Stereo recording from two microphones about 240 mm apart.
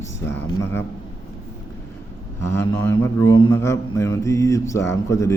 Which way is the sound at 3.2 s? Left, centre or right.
Left.